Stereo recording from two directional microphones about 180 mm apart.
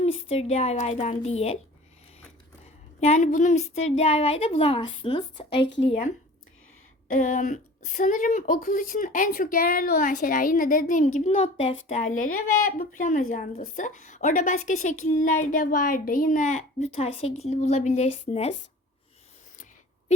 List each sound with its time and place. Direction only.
0.0 s a woman's voice: 35° left (ahead or behind)
3.0 s a woman's voice: 40° left (ahead or behind)
7.1 s a woman's voice: 45° left (ahead or behind)